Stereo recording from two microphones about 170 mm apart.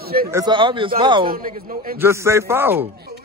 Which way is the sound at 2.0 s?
15° right (ahead or behind).